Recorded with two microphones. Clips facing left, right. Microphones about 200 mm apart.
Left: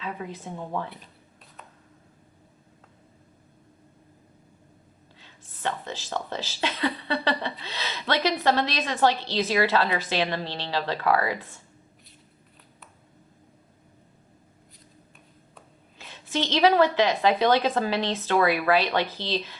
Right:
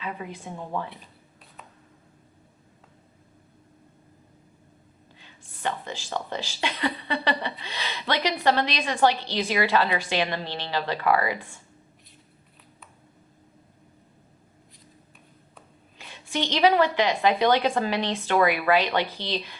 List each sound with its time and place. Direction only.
0.0 s a woman's voice: 15° right (ahead or behind)
5.2 s a woman's voice: 15° right (ahead or behind)
16.3 s a woman's voice: 15° right (ahead or behind)